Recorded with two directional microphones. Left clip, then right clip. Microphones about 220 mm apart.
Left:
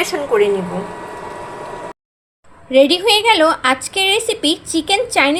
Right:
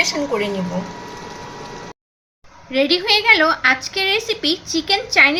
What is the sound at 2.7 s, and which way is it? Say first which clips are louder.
A woman's voice: left 5 dB; 20° left (ahead or behind).